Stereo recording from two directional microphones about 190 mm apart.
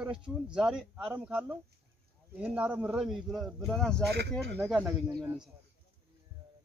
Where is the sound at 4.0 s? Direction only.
60° right (ahead or behind).